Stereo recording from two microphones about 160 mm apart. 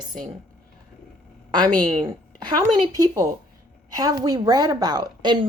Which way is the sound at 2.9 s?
20° right (ahead or behind).